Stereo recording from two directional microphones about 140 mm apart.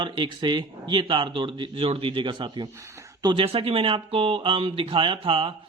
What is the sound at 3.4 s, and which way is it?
Speech, 45° right (ahead or behind).